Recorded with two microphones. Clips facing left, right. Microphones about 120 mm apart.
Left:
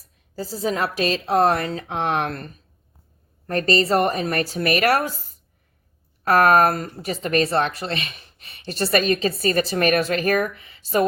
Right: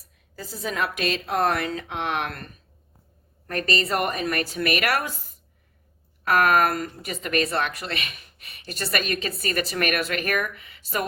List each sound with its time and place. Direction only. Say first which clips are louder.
0.3 s speech: left 5 dB; 35° left (ahead or behind)